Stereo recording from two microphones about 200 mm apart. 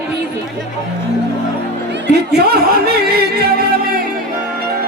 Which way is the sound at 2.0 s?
55° right (ahead or behind).